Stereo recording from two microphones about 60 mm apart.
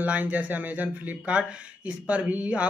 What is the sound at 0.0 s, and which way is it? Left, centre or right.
Speech, right.